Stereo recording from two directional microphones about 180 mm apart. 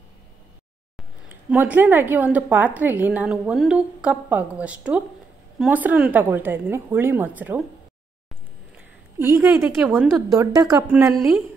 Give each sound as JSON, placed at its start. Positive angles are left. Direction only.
{"t": 1.3, "sound": "a woman's voice", "side_deg": -10}
{"t": 9.3, "sound": "a woman's voice", "side_deg": -15}